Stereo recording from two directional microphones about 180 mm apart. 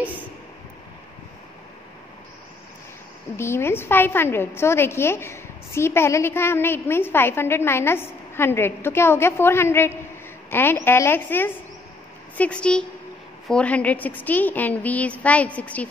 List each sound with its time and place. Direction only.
3.3 s a woman's voice: 15° left (ahead or behind)